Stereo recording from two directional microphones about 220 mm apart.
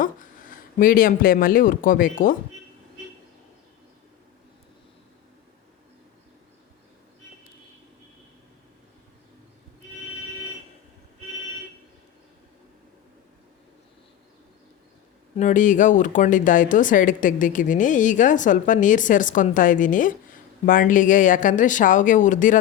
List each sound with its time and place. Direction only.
0.0 s speech: 40° left (ahead or behind)
15.4 s speech: 35° left (ahead or behind)